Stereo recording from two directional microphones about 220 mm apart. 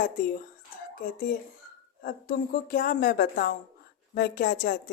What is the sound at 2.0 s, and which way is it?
A woman's voice, 40° left (ahead or behind).